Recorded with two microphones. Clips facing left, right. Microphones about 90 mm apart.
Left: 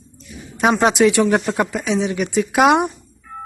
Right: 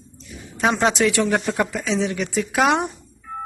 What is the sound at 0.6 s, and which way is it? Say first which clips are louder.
Speech: left 4 dB; 15° left (ahead or behind).